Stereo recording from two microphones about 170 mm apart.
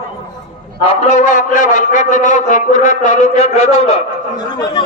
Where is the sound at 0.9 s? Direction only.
45° left (ahead or behind).